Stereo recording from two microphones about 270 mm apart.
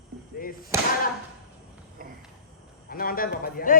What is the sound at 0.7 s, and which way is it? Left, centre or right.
Speech, centre.